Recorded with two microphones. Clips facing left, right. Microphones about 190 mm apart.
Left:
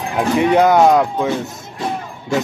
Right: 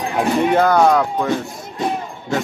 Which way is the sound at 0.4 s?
20° left (ahead or behind).